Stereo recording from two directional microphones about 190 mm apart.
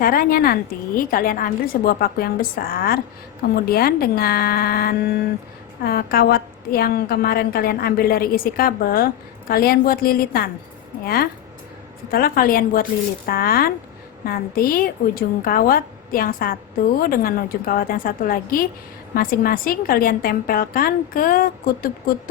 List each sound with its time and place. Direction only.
0.0 s a woman's voice: 50° left (ahead or behind)